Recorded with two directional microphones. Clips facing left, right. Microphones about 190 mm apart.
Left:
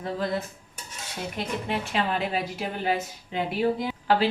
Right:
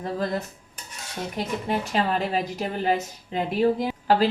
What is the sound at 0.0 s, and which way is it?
Speech, 40° right (ahead or behind).